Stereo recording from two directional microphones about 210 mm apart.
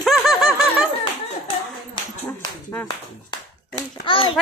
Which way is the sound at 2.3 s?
10° left (ahead or behind).